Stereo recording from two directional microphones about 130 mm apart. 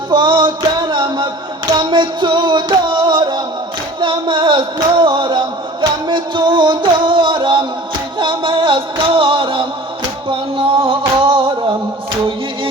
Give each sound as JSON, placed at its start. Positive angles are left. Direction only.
{"t": 0.1, "sound": "music", "side_deg": -35}
{"t": 4.0, "sound": "a sound", "side_deg": -40}
{"t": 8.2, "sound": "music", "side_deg": -40}